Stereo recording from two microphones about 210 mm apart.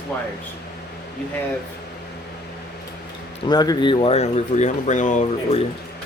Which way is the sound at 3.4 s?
20° left (ahead or behind).